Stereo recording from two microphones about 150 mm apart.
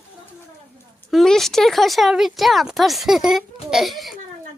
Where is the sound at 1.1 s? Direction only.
Centre (ahead or behind).